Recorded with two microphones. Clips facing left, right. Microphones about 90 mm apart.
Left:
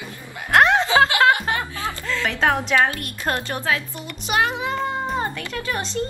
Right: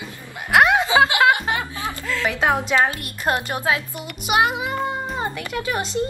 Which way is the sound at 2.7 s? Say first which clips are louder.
Even; 20° right (ahead or behind).